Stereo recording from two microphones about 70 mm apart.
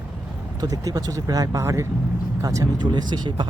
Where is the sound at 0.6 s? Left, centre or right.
Right.